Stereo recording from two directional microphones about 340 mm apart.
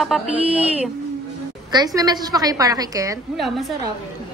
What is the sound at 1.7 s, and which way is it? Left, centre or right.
A woman's voice, centre.